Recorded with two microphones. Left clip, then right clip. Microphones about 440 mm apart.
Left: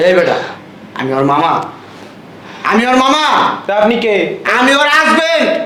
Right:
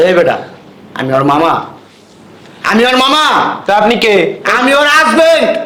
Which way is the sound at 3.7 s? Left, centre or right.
Right.